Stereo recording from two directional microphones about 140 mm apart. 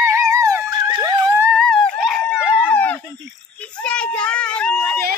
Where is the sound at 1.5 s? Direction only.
5° left (ahead or behind).